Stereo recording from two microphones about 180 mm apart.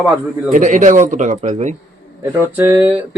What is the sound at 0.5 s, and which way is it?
Speech, 45° right (ahead or behind).